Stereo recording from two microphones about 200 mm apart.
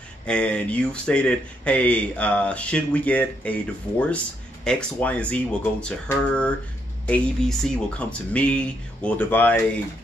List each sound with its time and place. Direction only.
0.3 s speech: 5° left (ahead or behind)
4.6 s speech: 5° left (ahead or behind)